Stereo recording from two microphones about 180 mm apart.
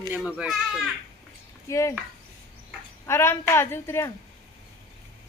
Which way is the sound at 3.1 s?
15° left (ahead or behind).